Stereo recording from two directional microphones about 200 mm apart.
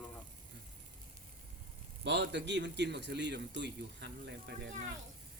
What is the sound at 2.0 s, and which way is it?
A man's voice, 60° right (ahead or behind).